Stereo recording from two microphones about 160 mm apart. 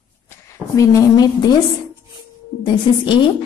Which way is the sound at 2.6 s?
30° left (ahead or behind).